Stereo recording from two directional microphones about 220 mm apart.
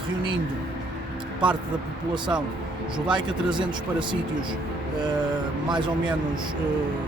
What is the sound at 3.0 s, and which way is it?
Speech, 20° right (ahead or behind).